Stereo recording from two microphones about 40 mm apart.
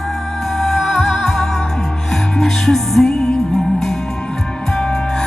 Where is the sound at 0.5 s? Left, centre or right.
Centre.